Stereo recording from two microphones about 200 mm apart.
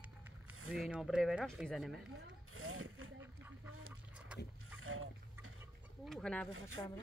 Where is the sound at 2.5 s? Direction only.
90° right.